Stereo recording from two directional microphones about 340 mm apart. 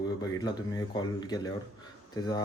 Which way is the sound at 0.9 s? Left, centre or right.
Centre.